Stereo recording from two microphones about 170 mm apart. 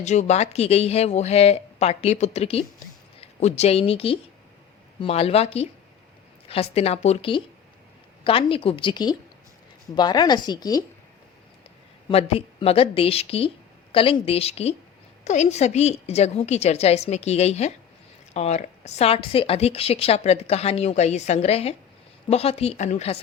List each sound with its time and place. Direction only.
0.0 s a woman's voice: 45° left (ahead or behind); by 10.8 s 25° left (ahead or behind)
12.0 s a woman's voice: 30° left (ahead or behind)